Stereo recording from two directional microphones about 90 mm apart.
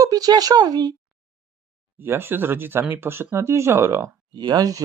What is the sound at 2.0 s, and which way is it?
Speech, 25° right (ahead or behind).